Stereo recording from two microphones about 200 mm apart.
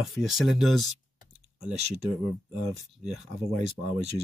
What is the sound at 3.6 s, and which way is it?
Speech, 30° right (ahead or behind).